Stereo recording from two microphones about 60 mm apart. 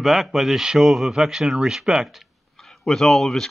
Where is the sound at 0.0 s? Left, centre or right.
Centre.